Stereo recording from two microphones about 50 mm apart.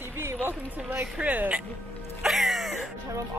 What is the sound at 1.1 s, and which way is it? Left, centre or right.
Speech, right.